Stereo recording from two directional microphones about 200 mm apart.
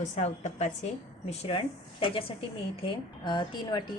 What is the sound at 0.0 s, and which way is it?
A woman's voice, 35° left (ahead or behind).